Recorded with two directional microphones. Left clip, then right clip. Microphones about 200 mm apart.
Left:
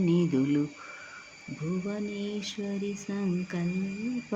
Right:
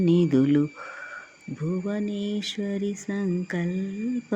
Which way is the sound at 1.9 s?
30° right (ahead or behind).